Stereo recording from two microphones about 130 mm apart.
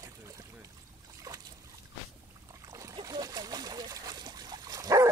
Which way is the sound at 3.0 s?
30° right (ahead or behind).